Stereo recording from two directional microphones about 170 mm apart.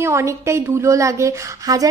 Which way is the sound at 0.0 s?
15° right (ahead or behind).